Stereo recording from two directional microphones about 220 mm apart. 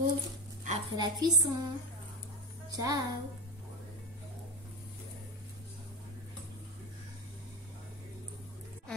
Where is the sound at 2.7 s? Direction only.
15° right (ahead or behind).